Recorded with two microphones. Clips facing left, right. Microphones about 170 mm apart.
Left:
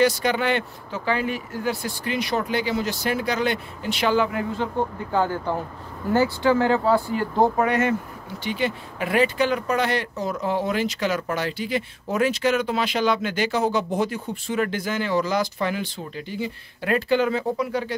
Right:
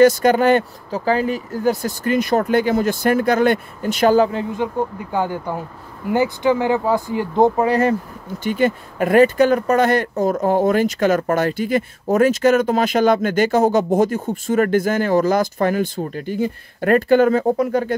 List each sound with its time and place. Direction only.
0.0 s speech: 45° right (ahead or behind)
4.3 s speech: 20° right (ahead or behind)
8.5 s speech: 50° right (ahead or behind)